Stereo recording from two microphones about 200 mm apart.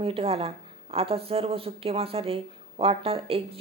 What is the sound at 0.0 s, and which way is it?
A woman's voice, 30° right (ahead or behind).